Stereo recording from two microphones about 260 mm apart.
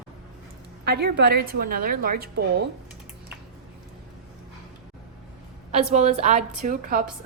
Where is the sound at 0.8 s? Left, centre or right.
Right.